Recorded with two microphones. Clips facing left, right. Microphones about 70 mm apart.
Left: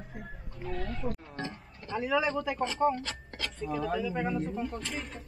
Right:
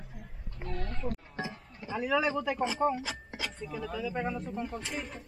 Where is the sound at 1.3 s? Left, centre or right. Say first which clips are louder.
Even; centre.